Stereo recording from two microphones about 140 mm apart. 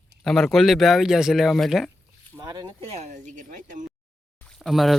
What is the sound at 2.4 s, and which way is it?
Speech, 30° right (ahead or behind).